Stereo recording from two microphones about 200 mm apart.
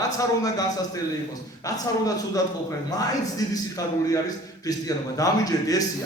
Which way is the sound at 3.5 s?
20° left (ahead or behind).